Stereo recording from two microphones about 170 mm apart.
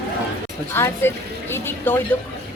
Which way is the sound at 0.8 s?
15° left (ahead or behind).